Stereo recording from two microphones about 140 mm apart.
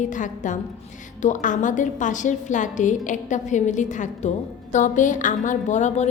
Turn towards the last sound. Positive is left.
turn(degrees=55)  # may be behind; listen again after turning